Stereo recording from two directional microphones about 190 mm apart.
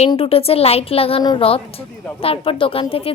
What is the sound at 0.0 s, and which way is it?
A woman's voice, 30° left (ahead or behind).